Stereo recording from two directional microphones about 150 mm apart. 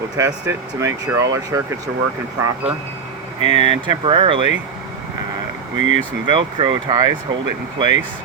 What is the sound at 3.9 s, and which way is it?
Speech, 35° right (ahead or behind).